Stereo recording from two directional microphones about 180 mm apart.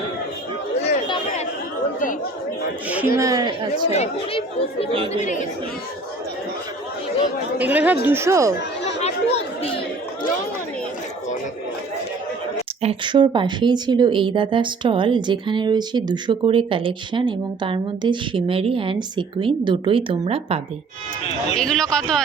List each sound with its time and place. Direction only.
3.2 s speech: 20° right (ahead or behind)
3.9 s speech: 35° left (ahead or behind)
7.6 s speech: 10° right (ahead or behind)
8.8 s chatter: 35° left (ahead or behind)
12.8 s speech: 30° right (ahead or behind)
21.5 s speech: 5° left (ahead or behind)